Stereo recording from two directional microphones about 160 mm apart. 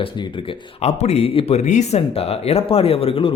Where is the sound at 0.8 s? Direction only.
40° left (ahead or behind).